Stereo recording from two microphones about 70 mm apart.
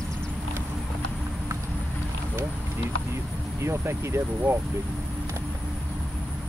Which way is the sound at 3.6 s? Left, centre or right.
Right.